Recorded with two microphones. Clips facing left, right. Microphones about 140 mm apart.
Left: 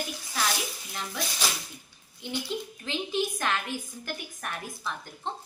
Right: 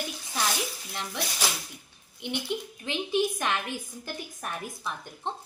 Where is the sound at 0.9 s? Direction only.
15° right (ahead or behind).